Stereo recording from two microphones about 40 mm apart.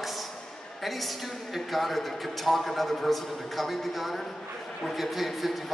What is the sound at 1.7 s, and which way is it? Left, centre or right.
Speech, centre.